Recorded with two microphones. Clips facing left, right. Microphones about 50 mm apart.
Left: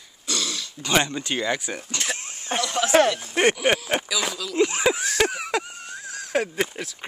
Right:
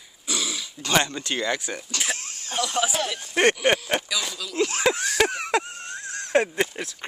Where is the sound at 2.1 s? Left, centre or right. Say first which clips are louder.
Left 5 dB; left.